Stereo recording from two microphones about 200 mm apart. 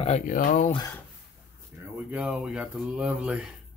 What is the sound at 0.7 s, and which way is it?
Speech, 20° left (ahead or behind).